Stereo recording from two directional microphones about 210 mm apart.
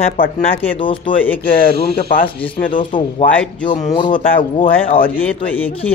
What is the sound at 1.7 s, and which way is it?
Speech, 50° right (ahead or behind).